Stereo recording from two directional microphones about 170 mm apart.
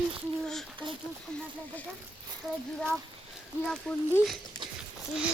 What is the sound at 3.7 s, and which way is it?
Speech, 5° left (ahead or behind).